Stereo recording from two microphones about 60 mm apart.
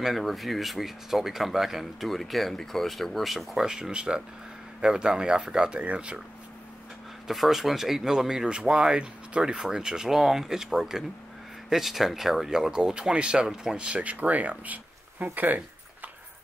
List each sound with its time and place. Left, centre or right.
0.0 s speech: centre
7.2 s speech: centre
13.8 s speech: right
15.3 s a sound: right